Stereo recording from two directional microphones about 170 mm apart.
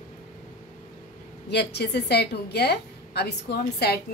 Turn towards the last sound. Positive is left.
turn(degrees=70)  # may be behind; listen again after turning